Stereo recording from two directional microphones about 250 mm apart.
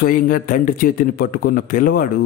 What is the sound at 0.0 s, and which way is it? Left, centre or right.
A man's voice, left.